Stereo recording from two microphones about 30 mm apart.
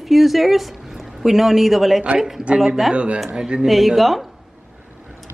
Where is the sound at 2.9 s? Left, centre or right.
Right.